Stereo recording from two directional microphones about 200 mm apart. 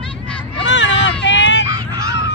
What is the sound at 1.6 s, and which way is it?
Honk, 15° right (ahead or behind).